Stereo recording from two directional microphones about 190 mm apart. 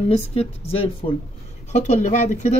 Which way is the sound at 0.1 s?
35° left (ahead or behind).